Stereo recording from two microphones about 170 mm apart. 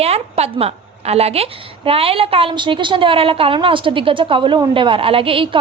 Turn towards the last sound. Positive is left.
turn(degrees=-30)  # may be behind; listen again after turning